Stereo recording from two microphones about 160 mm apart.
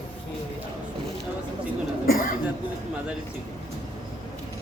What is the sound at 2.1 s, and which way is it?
Cough, 60° left (ahead or behind).